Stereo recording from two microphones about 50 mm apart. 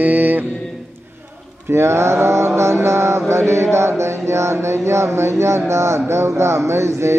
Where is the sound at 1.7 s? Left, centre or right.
Right.